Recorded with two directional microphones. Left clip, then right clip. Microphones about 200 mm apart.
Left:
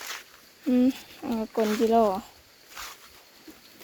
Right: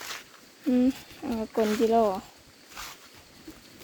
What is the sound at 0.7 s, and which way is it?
Speech, centre (ahead or behind).